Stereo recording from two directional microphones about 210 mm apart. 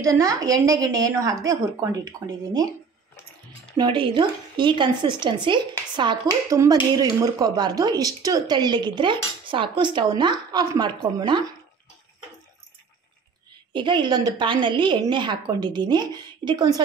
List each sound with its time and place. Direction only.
0.0 s a woman's voice: 15° right (ahead or behind)
3.7 s a woman's voice: 25° right (ahead or behind)
13.7 s a woman's voice: 20° right (ahead or behind)